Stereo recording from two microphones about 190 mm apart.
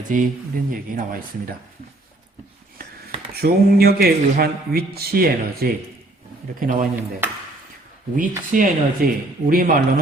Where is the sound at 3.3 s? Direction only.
55° right (ahead or behind).